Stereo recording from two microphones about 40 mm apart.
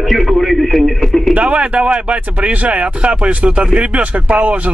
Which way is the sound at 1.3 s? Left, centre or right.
Right.